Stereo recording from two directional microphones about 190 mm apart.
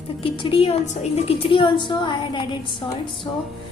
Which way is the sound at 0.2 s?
25° left (ahead or behind).